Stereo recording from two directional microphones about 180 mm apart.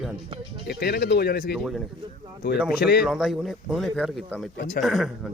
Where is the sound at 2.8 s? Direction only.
60° left (ahead or behind).